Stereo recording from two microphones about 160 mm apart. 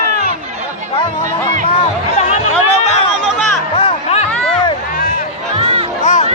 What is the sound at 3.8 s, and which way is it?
Music, 40° left (ahead or behind).